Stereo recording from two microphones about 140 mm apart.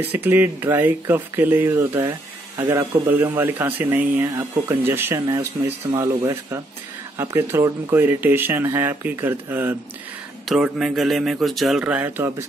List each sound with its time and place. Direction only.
0.0 s speech: 15° right (ahead or behind)
10.5 s speech: 5° right (ahead or behind)
11.8 s speech: 10° right (ahead or behind)